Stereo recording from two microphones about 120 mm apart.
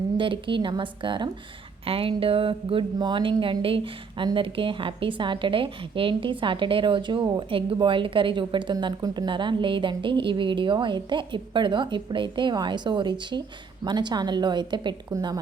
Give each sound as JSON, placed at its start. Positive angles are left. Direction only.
{"t": 0.2, "sound": "a woman's voice", "side_deg": -45}